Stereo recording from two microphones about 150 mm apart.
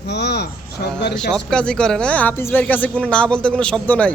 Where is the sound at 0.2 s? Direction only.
90° left.